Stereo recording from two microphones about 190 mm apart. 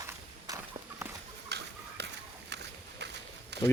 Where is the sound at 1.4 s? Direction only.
60° right (ahead or behind).